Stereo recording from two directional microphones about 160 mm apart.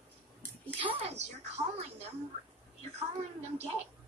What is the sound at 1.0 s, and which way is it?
Speech, 45° right (ahead or behind).